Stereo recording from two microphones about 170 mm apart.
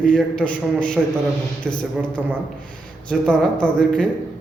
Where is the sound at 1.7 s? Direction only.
10° right (ahead or behind).